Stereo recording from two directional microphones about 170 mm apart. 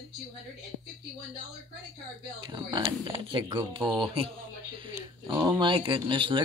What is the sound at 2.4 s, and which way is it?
Speech, 25° right (ahead or behind).